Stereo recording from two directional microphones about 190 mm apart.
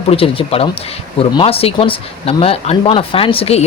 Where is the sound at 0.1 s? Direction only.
30° left (ahead or behind).